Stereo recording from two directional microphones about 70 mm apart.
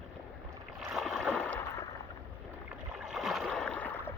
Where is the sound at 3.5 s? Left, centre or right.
Centre.